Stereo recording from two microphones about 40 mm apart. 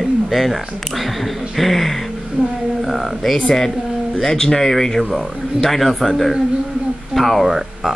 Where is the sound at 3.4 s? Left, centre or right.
Centre.